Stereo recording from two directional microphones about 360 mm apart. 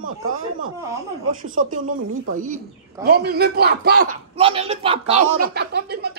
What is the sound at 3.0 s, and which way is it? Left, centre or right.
A man's voice, right.